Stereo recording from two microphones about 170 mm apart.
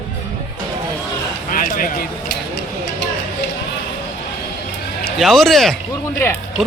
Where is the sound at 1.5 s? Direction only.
55° left (ahead or behind).